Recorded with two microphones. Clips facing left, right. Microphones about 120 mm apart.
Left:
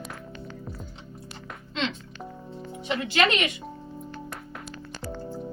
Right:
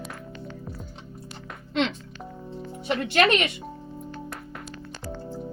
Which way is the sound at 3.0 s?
50° right (ahead or behind).